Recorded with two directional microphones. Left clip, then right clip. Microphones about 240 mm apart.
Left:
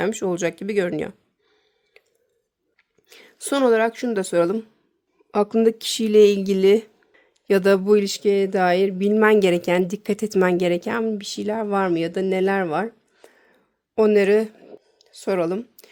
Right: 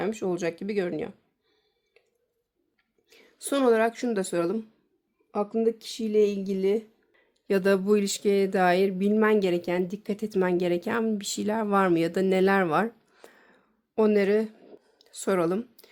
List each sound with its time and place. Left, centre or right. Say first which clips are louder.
0.0 s speech: left 6 dB; left
3.1 s speech: left 5 dB; left
5.3 s speech: left 7 dB; left
7.2 s speech: left 7 dB; left; by 13.6 s centre
13.9 s speech: left 6 dB; centre
14.9 s a sound: left 3 dB; centre